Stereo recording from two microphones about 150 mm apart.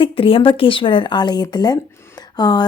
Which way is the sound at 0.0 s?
35° left (ahead or behind).